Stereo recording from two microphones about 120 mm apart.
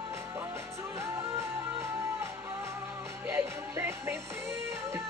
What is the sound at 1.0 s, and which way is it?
Music, 25° right (ahead or behind).